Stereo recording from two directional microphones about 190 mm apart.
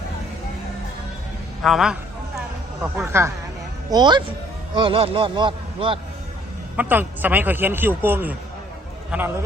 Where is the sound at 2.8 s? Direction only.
10° right (ahead or behind).